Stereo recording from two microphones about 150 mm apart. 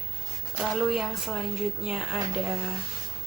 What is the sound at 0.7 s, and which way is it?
Speech, centre (ahead or behind).